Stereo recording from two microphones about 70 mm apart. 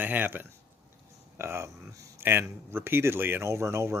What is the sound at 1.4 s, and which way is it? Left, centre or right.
Speech, right.